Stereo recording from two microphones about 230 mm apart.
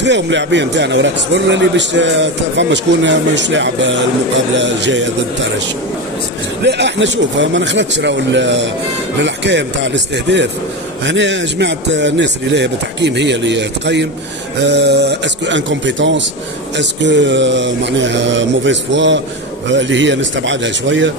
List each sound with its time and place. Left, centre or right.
0.0 s a man's voice: right
6.6 s a man's voice: right